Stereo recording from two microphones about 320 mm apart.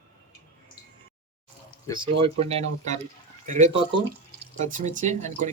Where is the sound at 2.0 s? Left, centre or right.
Centre.